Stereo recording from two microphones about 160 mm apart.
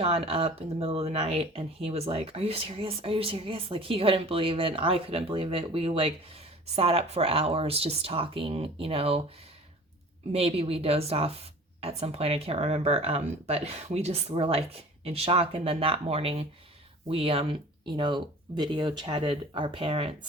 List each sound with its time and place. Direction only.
0.0 s speech: 35° right (ahead or behind)
10.3 s speech: 40° right (ahead or behind)